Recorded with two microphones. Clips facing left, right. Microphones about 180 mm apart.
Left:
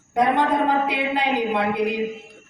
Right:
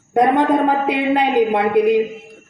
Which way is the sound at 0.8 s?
55° right (ahead or behind).